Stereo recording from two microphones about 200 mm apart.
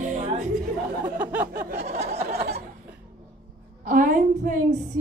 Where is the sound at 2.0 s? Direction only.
30° right (ahead or behind).